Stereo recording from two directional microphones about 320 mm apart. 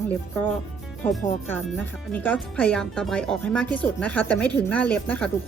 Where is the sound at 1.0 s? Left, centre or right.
Centre.